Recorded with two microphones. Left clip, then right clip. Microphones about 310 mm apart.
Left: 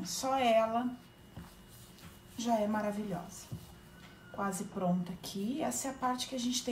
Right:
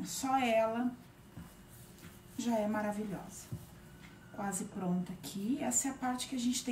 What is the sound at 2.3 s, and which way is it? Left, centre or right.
Speech, centre.